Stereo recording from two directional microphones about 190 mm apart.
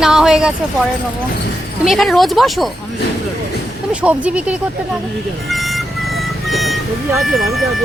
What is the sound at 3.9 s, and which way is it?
Speech, 5° right (ahead or behind).